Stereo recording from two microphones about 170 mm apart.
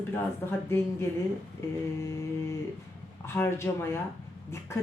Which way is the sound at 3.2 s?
15° left (ahead or behind).